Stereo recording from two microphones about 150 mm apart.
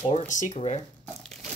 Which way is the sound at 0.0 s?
55° left (ahead or behind).